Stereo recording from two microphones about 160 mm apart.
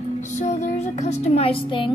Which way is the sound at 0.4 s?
45° left (ahead or behind).